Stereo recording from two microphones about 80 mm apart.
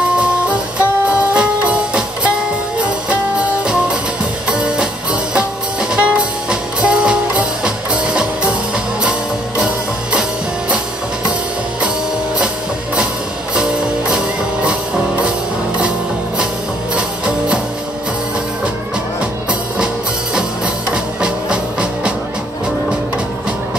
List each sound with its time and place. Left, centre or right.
0.5 s music: centre
13.6 s music: centre
20.3 s music: centre